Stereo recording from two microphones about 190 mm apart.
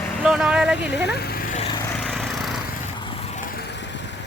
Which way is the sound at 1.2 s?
55° left (ahead or behind).